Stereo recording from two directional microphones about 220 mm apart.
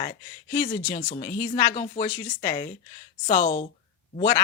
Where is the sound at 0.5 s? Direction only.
15° left (ahead or behind).